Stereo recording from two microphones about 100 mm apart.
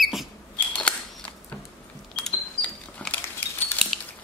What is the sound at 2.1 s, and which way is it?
Cash register, 10° left (ahead or behind).